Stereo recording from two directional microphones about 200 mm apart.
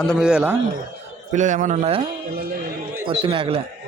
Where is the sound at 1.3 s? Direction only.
40° right (ahead or behind).